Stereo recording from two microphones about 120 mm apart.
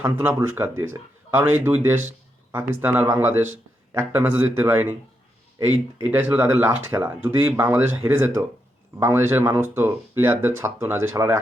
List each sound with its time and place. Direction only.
0.0 s speech: 20° right (ahead or behind)